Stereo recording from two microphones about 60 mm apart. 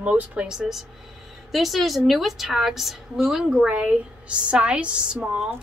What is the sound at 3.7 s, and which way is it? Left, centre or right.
A woman's voice, right.